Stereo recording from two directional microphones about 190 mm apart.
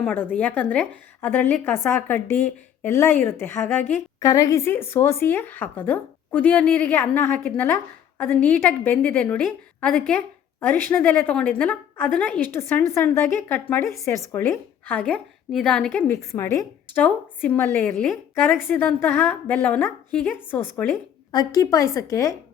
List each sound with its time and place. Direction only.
0.0 s a woman's voice: 10° left (ahead or behind)